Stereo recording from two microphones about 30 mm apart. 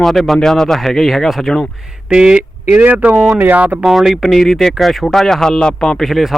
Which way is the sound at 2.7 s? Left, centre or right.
Right.